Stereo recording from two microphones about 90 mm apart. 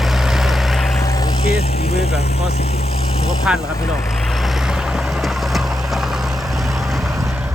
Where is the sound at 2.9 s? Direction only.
90° left.